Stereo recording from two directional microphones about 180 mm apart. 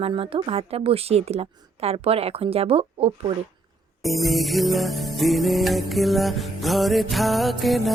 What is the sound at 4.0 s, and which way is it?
Music, centre (ahead or behind).